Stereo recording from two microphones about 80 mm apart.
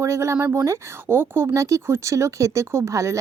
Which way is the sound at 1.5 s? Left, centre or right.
Right.